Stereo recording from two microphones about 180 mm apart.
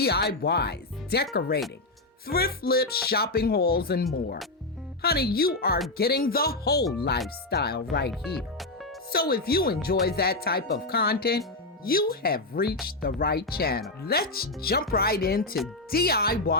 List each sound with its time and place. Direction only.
0.0 s speech: 60° left (ahead or behind)